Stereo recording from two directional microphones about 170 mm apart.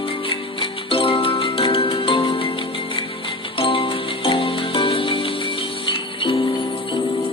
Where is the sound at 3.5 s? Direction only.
30° left (ahead or behind).